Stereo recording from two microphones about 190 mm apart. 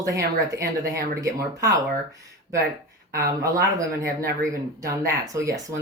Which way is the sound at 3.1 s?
15° right (ahead or behind).